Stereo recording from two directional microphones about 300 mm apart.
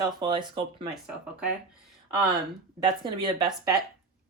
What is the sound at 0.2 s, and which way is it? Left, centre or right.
Speech, centre.